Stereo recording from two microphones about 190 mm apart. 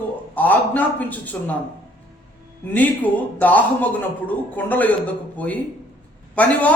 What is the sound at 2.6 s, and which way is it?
Speech, 10° left (ahead or behind).